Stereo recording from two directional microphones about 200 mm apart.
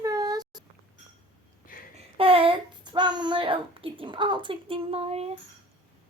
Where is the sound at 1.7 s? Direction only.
45° left (ahead or behind).